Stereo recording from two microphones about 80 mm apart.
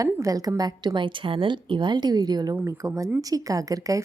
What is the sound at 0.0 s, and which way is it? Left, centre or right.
Speech, right.